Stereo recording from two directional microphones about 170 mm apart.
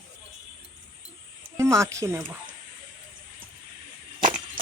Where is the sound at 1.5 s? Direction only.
15° right (ahead or behind).